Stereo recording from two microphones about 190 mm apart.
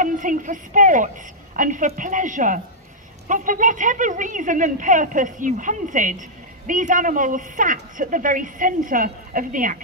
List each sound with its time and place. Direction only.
0.0 s speech: 45° right (ahead or behind)